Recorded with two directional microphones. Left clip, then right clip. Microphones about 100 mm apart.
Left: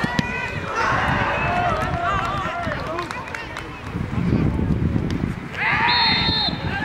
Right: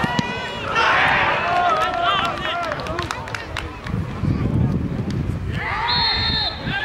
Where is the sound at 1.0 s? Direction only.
35° right (ahead or behind).